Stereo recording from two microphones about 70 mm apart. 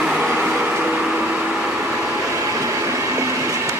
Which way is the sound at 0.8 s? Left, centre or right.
Centre.